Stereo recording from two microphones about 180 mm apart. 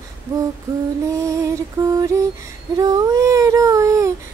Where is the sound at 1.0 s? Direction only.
15° right (ahead or behind).